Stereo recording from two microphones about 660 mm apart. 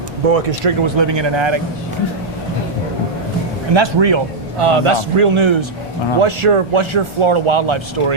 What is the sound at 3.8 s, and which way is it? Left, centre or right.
A man's voice, right.